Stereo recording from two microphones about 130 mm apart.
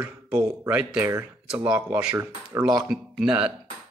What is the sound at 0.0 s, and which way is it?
Speech, 10° right (ahead or behind).